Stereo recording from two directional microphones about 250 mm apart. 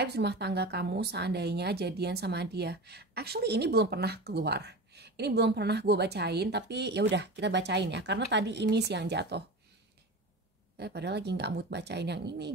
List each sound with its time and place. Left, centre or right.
0.0 s a woman's voice: right
10.8 s a woman's voice: right